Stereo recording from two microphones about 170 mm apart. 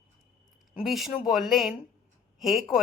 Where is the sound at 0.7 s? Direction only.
5° right (ahead or behind).